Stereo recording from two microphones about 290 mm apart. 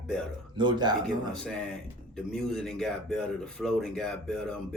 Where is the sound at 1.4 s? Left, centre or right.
Centre.